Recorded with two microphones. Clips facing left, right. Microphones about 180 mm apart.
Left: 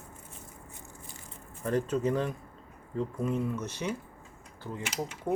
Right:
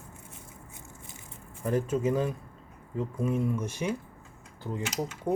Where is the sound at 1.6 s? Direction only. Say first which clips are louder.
Right 1 dB; 10° right (ahead or behind).